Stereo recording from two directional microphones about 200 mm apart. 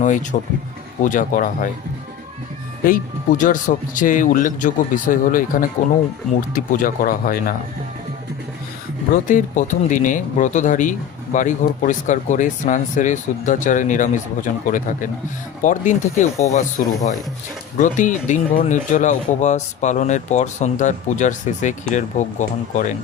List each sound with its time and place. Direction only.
0.0 s speech: 40° left (ahead or behind)
2.8 s speech: 40° left (ahead or behind)
9.2 s speech: 40° left (ahead or behind)